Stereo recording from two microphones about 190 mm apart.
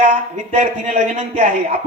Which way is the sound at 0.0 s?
35° right (ahead or behind).